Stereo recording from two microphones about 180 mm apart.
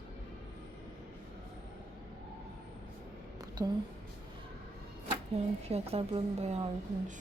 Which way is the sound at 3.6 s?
20° right (ahead or behind).